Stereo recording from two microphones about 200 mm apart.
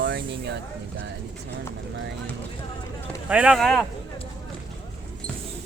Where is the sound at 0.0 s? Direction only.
65° right (ahead or behind).